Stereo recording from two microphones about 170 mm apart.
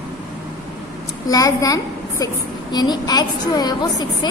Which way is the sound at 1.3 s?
20° left (ahead or behind).